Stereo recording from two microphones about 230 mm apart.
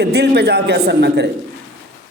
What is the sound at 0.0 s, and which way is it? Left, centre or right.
A man's voice, right.